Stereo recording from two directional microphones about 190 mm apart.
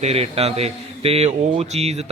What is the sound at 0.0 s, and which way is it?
A man's voice, 35° right (ahead or behind).